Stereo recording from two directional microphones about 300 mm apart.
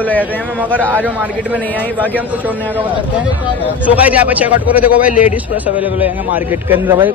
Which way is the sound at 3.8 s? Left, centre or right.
Centre.